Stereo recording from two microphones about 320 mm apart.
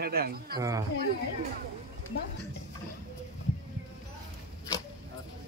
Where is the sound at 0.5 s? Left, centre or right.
Centre.